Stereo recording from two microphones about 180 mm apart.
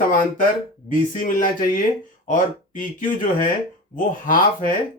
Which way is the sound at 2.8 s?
45° left (ahead or behind).